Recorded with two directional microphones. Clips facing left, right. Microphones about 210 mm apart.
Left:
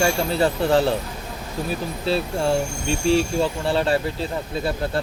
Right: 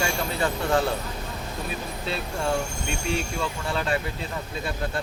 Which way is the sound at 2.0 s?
30° left (ahead or behind).